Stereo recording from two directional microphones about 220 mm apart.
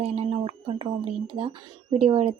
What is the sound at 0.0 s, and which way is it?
Speech, 30° right (ahead or behind).